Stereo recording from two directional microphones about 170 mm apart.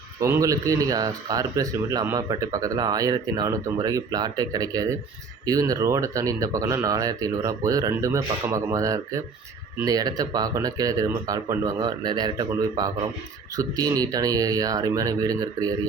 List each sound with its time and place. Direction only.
0.2 s speech: 15° right (ahead or behind)